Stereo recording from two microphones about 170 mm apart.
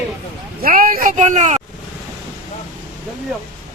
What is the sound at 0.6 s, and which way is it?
Speech, 55° right (ahead or behind).